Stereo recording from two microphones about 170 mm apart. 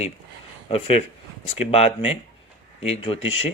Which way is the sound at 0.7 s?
35° left (ahead or behind).